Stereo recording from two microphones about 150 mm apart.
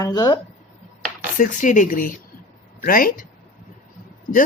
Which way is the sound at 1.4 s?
60° left (ahead or behind).